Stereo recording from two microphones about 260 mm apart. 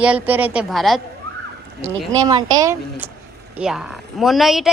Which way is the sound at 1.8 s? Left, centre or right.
Centre.